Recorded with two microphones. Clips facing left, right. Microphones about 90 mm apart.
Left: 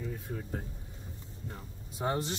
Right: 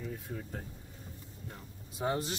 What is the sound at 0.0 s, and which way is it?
Speech, 5° left (ahead or behind).